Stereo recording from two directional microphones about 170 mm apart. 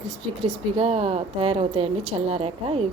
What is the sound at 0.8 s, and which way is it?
Speech, 35° right (ahead or behind).